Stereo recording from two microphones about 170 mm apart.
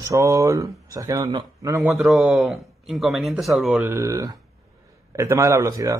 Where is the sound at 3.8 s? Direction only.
15° right (ahead or behind).